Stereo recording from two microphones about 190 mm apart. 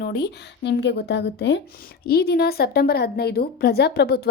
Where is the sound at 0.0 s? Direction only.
60° left (ahead or behind).